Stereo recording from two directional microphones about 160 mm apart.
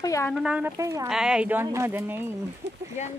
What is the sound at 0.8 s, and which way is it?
Speech, 20° right (ahead or behind).